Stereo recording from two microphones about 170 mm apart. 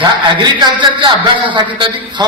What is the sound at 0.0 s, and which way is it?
A man's voice, 25° right (ahead or behind).